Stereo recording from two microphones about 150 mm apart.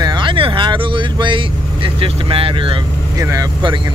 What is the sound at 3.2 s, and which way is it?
Speech, 20° right (ahead or behind).